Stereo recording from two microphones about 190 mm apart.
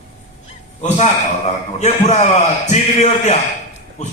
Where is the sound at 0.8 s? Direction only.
35° left (ahead or behind).